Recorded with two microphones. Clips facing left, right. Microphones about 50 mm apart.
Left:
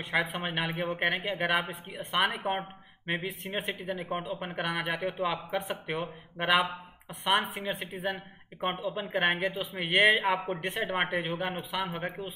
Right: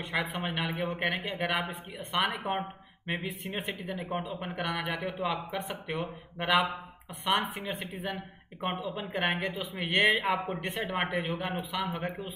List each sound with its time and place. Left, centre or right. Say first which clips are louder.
0.0 s speech: left 2 dB; centre
6.3 s speech: left 1 dB; centre